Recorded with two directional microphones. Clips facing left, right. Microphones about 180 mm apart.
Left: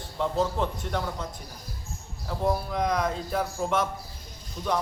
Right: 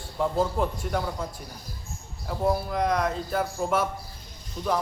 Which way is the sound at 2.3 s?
Centre (ahead or behind).